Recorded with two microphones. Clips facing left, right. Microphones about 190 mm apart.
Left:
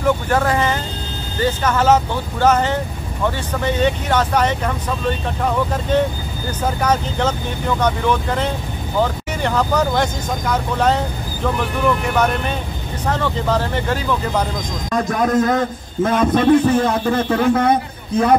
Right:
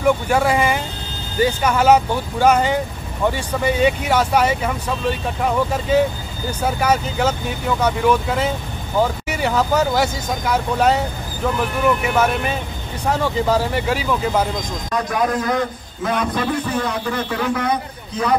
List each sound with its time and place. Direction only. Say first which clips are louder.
0.0 s speech: right 1 dB; 10° right (ahead or behind)
14.9 s a man's voice: left 3 dB; 45° left (ahead or behind)